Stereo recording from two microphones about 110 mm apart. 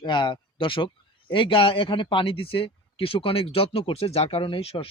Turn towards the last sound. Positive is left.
turn(degrees=60)  # may be behind; listen again after turning